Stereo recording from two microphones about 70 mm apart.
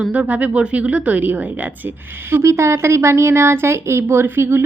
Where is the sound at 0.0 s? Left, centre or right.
Right.